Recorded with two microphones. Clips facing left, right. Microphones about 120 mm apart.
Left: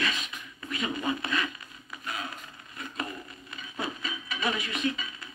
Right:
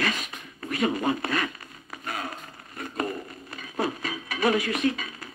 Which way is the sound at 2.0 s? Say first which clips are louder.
Right 3 dB; 45° right (ahead or behind).